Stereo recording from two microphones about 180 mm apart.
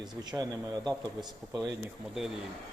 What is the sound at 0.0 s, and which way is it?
Speech, 20° right (ahead or behind).